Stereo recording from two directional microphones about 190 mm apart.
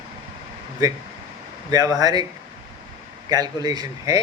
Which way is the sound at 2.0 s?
20° right (ahead or behind).